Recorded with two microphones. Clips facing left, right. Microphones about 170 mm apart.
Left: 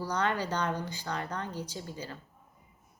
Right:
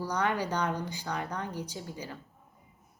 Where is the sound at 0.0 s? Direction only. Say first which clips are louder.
Right 1 dB; 10° right (ahead or behind).